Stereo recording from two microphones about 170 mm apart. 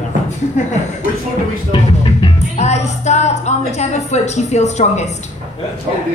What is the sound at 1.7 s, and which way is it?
Music, 30° left (ahead or behind).